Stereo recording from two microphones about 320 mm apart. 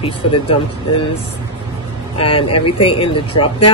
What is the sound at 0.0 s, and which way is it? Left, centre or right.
Speech, centre.